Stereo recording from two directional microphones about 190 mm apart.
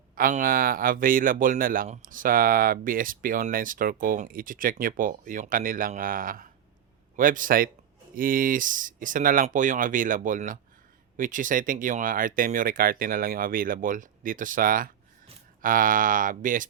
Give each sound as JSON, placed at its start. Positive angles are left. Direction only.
{"t": 0.2, "sound": "speech", "side_deg": -50}